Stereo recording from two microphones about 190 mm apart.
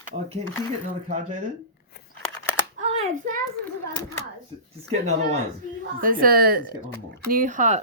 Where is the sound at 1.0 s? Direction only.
40° right (ahead or behind).